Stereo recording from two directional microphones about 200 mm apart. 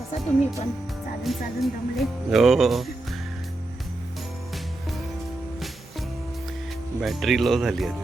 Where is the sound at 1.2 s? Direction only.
Centre (ahead or behind).